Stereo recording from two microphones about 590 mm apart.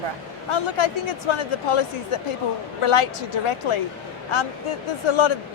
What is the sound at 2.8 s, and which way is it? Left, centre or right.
Speech, left.